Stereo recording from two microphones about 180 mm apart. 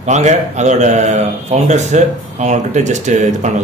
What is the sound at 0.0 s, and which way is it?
A man's voice, 40° right (ahead or behind).